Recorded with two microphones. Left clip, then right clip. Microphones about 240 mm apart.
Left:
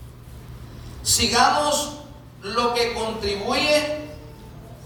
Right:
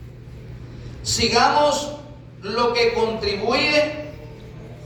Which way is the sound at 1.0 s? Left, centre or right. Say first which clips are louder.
Right 1 dB; centre.